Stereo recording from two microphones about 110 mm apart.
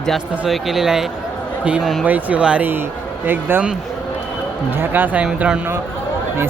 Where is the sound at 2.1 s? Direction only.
15° right (ahead or behind).